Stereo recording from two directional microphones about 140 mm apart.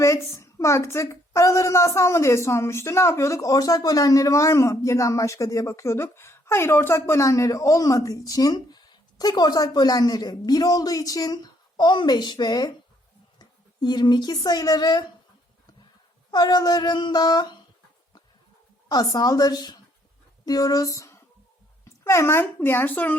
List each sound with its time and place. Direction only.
0.0 s a woman's voice: 20° left (ahead or behind)
16.3 s a woman's voice: 30° left (ahead or behind)
18.9 s a woman's voice: 25° left (ahead or behind)